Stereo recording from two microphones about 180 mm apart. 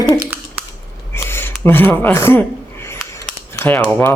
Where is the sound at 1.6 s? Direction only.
10° left (ahead or behind).